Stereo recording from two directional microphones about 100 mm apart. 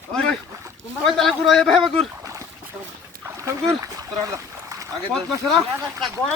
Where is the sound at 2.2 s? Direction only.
30° right (ahead or behind).